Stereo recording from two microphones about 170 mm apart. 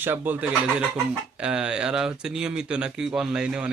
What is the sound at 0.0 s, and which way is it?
Speech, 10° right (ahead or behind).